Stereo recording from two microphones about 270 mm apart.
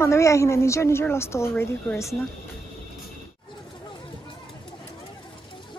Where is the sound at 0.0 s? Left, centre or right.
Centre.